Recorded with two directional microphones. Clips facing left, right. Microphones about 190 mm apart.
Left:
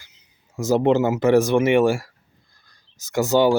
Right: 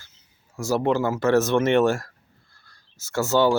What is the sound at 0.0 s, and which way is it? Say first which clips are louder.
Speech: even; 15° left (ahead or behind).